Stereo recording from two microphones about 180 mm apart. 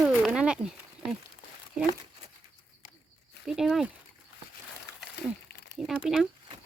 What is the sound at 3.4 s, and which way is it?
Speech, centre (ahead or behind).